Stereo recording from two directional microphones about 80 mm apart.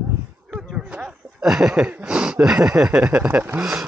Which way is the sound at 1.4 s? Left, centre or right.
Centre.